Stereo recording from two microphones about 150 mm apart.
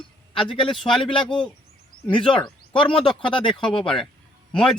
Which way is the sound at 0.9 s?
35° left (ahead or behind).